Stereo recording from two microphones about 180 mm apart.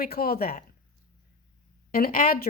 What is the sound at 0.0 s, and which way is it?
Speech, 55° left (ahead or behind).